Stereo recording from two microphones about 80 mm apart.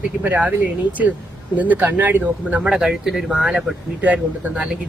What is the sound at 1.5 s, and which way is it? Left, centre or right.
Speech, right.